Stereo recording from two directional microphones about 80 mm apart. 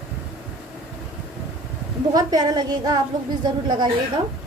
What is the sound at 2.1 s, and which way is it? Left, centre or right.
Speech, right.